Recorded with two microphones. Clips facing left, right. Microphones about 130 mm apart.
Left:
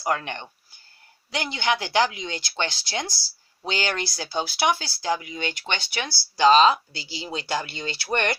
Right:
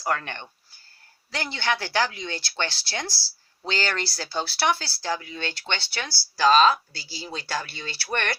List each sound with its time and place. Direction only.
0.0 s speech: 15° left (ahead or behind)